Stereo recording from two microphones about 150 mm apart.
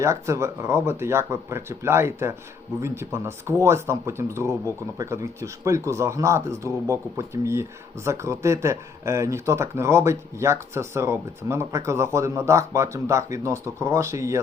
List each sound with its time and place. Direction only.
0.0 s speech: 20° right (ahead or behind)